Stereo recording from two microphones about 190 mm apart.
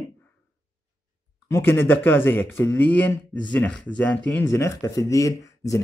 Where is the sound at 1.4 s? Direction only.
15° left (ahead or behind).